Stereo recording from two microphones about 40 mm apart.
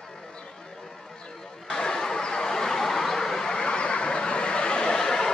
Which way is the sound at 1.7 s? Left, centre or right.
Centre.